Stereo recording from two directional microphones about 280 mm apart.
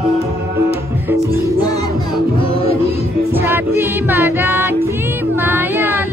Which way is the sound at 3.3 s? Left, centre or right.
Centre.